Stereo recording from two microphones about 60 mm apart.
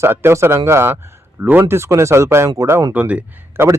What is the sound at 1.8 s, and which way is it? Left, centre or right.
A man's voice, right.